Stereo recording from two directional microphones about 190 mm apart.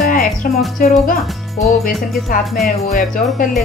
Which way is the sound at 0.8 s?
45° left (ahead or behind).